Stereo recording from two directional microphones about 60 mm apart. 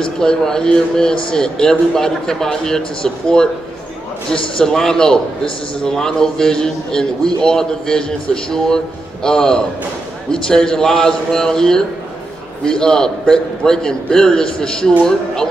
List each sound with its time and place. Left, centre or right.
0.0 s a man's voice: centre